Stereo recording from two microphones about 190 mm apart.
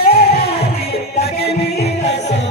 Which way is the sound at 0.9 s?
35° left (ahead or behind).